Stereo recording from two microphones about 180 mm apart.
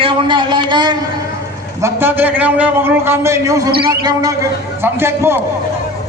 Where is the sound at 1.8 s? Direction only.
10° right (ahead or behind).